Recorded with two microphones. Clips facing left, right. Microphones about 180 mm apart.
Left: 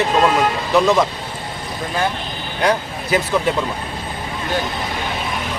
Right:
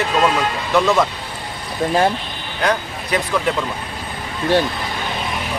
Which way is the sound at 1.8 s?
30° right (ahead or behind).